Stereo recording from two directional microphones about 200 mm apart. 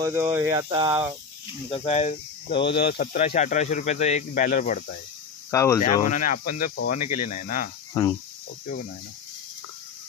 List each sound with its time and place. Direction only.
0.0 s speech: 15° right (ahead or behind)
1.7 s speech: 30° left (ahead or behind)
2.7 s speech: 55° left (ahead or behind)
5.5 s speech: 15° left (ahead or behind)
6.0 s speech: 40° left (ahead or behind)
7.9 s cricket: 15° left (ahead or behind)